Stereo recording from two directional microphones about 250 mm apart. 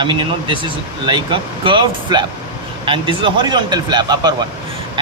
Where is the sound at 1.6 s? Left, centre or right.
Centre.